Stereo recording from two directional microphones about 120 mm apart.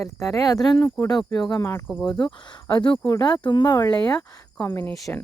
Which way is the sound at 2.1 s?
40° left (ahead or behind).